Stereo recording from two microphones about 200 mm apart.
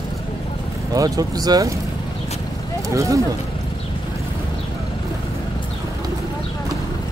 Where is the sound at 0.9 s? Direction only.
20° right (ahead or behind).